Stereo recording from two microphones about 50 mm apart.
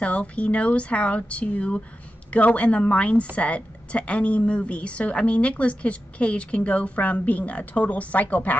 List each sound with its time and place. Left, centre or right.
0.0 s a woman's voice: left